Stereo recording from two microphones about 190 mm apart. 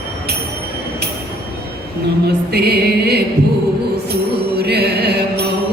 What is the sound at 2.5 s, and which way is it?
Music, 60° right (ahead or behind).